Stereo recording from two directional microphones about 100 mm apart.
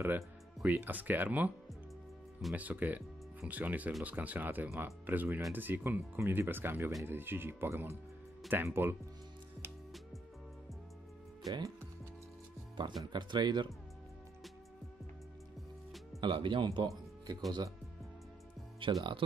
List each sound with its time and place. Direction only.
0.7 s speech: 15° right (ahead or behind)
2.5 s speech: 15° right (ahead or behind)
11.4 s speech: 40° right (ahead or behind)
12.8 s speech: 55° right (ahead or behind)
16.2 s speech: 55° right (ahead or behind)
16.6 s speech: 40° right (ahead or behind)
18.8 s speech: 60° right (ahead or behind)